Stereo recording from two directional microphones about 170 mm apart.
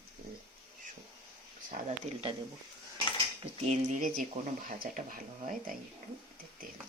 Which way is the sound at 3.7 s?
45° right (ahead or behind).